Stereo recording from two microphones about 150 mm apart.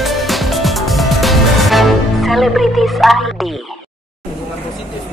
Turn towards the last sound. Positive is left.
turn(degrees=0)  # may be behind; listen again after turning